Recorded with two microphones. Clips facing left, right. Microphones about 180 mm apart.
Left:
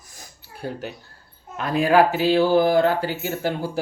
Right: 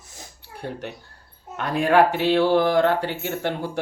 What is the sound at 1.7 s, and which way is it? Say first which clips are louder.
Speech: left 1 dB; 5° left (ahead or behind).